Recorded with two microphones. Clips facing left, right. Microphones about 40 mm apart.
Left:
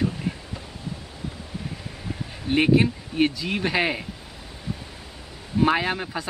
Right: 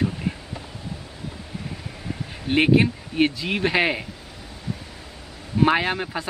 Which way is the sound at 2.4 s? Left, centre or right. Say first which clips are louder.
Right 1 dB; centre.